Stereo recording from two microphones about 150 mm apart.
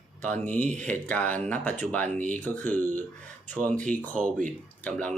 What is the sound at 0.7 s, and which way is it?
Speech, 10° left (ahead or behind).